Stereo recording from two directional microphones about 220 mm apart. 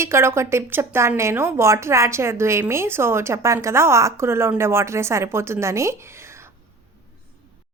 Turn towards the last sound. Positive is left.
turn(degrees=-10)  # may be behind; listen again after turning